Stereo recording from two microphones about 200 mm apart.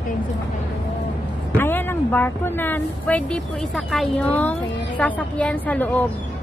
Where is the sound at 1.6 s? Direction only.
10° left (ahead or behind).